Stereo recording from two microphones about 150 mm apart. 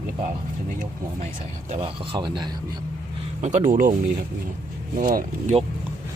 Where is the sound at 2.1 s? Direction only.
30° right (ahead or behind).